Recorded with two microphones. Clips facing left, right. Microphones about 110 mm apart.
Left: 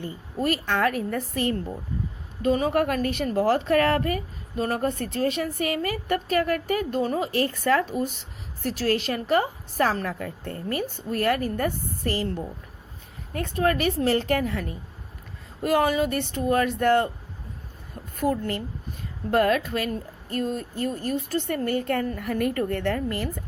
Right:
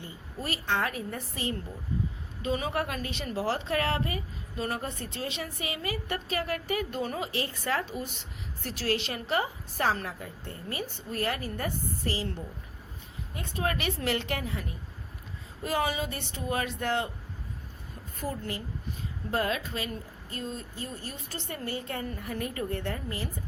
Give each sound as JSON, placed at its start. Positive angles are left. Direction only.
{"t": 0.0, "sound": "a woman's voice", "side_deg": 55}
{"t": 2.4, "sound": "a woman's voice", "side_deg": 45}
{"t": 10.2, "sound": "a woman's voice", "side_deg": 60}
{"t": 15.6, "sound": "a woman's voice", "side_deg": 50}
{"t": 18.2, "sound": "a woman's voice", "side_deg": 65}